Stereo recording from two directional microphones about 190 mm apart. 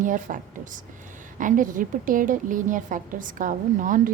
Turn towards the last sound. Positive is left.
turn(degrees=-45)  # may be behind; listen again after turning